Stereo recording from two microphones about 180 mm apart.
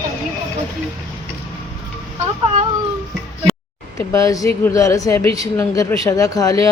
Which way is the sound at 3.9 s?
20° left (ahead or behind).